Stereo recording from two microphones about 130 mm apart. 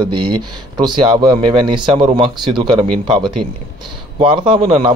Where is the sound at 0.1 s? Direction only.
35° right (ahead or behind).